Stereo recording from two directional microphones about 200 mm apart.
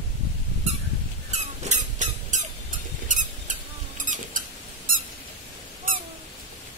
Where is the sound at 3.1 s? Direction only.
40° right (ahead or behind).